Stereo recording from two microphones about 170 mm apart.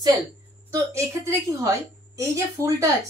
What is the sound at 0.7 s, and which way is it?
Speech, 20° right (ahead or behind).